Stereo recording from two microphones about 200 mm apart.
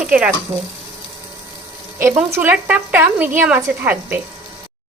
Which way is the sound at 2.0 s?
10° right (ahead or behind).